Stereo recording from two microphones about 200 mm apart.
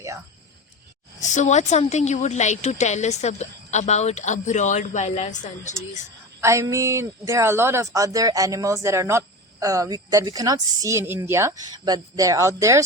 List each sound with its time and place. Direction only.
1.2 s a woman's voice: 40° left (ahead or behind)
6.4 s speech: 15° right (ahead or behind)